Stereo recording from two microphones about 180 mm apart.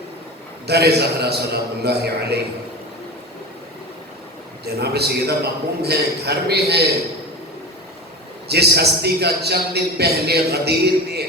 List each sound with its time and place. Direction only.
0.7 s a man's voice: 65° right (ahead or behind)
4.6 s a man's voice: 65° right (ahead or behind)
8.4 s a man's voice: 65° right (ahead or behind)